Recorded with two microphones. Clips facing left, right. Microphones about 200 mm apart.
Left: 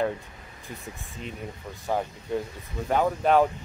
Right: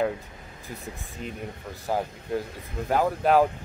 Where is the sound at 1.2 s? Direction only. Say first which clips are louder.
Right 1 dB; centre (ahead or behind).